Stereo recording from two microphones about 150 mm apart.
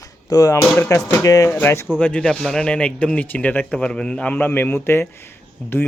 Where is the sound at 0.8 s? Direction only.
15° left (ahead or behind).